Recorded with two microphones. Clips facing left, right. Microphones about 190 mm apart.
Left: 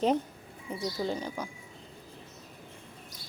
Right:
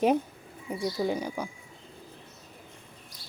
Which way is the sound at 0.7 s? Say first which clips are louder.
Right 3 dB; 10° right (ahead or behind).